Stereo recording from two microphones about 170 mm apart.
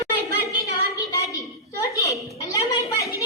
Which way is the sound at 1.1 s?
20° left (ahead or behind).